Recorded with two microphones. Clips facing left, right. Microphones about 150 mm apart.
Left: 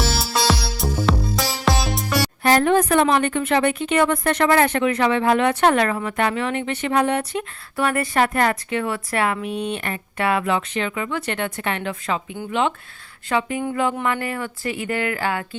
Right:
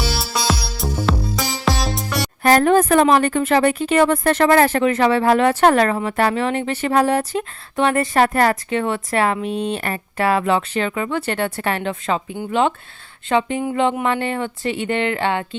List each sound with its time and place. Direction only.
0.0 s music: centre (ahead or behind)
2.4 s a woman's voice: 45° right (ahead or behind)
13.2 s speech: 25° right (ahead or behind)